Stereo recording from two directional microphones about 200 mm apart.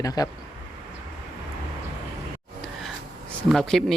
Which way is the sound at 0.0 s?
20° left (ahead or behind).